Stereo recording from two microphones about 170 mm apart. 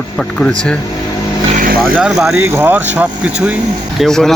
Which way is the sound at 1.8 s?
5° right (ahead or behind).